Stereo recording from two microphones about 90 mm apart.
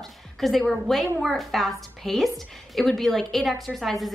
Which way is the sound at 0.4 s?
5° left (ahead or behind).